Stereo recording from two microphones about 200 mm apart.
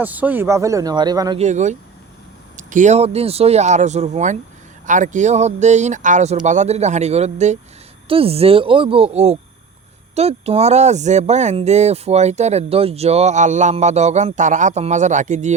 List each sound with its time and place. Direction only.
0.0 s speech: 10° right (ahead or behind)
1.4 s speech: 35° right (ahead or behind)